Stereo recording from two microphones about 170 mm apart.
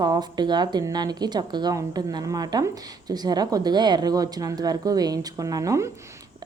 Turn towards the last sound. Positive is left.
turn(degrees=-20)  # may be behind; listen again after turning